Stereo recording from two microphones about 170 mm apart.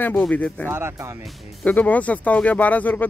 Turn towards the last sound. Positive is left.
turn(degrees=10)  # may be behind; listen again after turning